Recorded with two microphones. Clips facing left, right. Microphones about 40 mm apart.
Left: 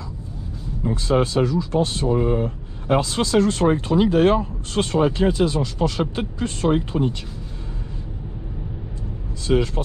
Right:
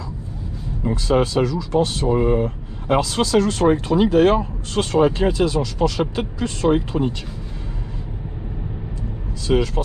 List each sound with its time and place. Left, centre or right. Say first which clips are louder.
0.8 s speech: right 1 dB; right
2.1 s speech: right 4 dB; right